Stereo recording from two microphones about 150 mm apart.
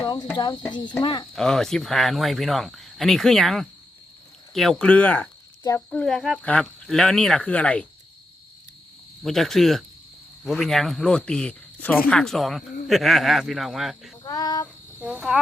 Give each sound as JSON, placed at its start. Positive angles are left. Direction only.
{"t": 0.0, "sound": "speech", "side_deg": 25}
{"t": 1.4, "sound": "speech", "side_deg": 5}
{"t": 5.9, "sound": "speech", "side_deg": 5}
{"t": 9.2, "sound": "speech", "side_deg": 0}
{"t": 14.3, "sound": "speech", "side_deg": 25}
{"t": 15.0, "sound": "speech", "side_deg": -5}